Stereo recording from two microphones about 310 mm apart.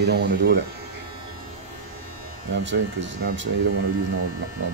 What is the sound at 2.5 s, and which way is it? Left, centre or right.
Speech, right.